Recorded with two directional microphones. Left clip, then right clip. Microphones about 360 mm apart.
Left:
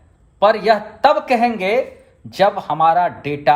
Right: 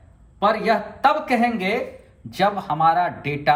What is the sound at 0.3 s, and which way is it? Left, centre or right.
Speech, left.